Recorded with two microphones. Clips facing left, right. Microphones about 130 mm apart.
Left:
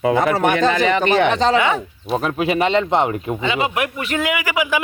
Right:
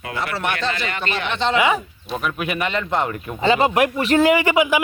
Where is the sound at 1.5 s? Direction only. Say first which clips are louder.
Left 1 dB; 5° right (ahead or behind).